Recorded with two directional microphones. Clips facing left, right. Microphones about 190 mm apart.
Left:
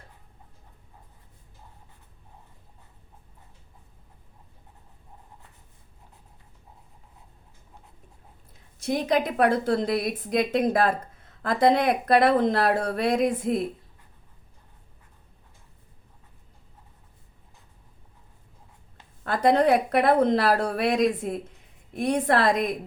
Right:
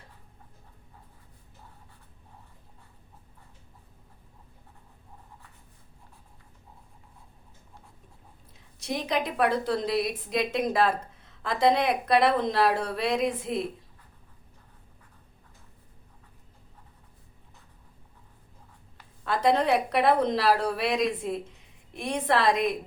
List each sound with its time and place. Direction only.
8.8 s a woman's voice: 50° left (ahead or behind)
19.2 s a woman's voice: 50° left (ahead or behind)